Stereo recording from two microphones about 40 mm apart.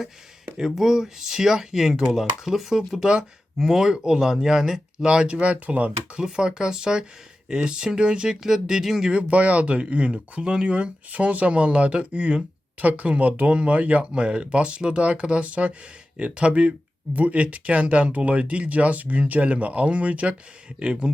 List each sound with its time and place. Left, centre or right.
0.6 s speech: centre
3.6 s speech: centre
5.0 s speech: right
6.1 s speech: centre
9.2 s speech: right
12.8 s speech: right
14.0 s speech: right